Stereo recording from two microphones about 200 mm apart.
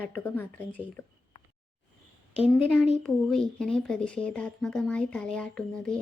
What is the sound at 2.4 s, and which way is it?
Speech, centre (ahead or behind).